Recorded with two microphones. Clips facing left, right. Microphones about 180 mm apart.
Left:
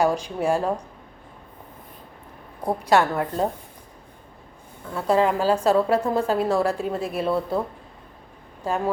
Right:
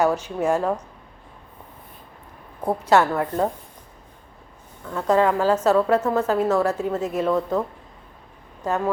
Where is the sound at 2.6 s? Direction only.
15° left (ahead or behind).